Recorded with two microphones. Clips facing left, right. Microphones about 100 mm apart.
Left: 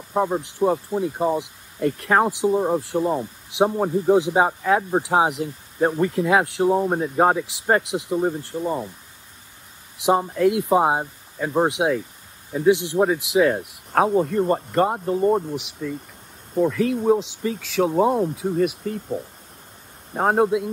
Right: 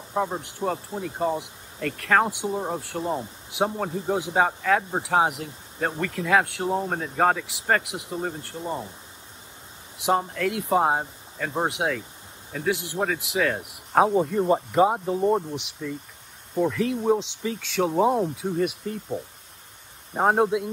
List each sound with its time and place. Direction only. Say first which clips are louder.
0.1 s speech: left 5 dB; 15° left (ahead or behind)
10.0 s speech: left 5 dB; 20° left (ahead or behind)
13.9 s speech: left 1 dB; centre (ahead or behind)
20.2 s speech: left 2 dB; centre (ahead or behind)